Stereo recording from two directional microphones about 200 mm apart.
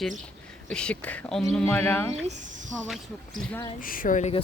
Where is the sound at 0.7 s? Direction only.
5° left (ahead or behind).